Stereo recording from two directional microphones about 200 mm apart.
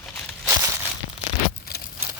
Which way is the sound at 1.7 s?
50° left (ahead or behind).